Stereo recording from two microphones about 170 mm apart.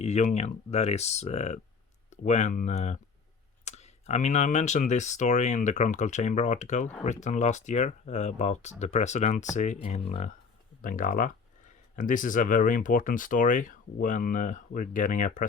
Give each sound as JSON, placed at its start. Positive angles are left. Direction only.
{"t": 0.0, "sound": "speech", "side_deg": 45}
{"t": 10.8, "sound": "speech", "side_deg": 50}